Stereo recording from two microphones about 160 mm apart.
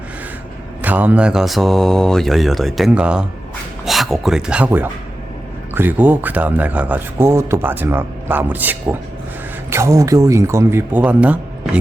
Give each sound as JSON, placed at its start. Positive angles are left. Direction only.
{"t": 0.8, "sound": "speech", "side_deg": -10}